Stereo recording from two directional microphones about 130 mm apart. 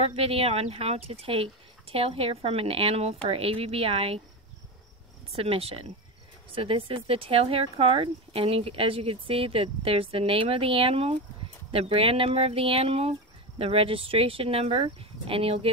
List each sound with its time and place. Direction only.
0.0 s speech: 50° right (ahead or behind)
5.3 s speech: 50° right (ahead or behind)